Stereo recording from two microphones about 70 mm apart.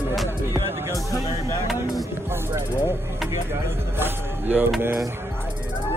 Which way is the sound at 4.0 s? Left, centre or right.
Right.